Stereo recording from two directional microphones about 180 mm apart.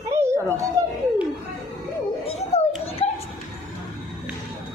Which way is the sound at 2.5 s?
35° left (ahead or behind).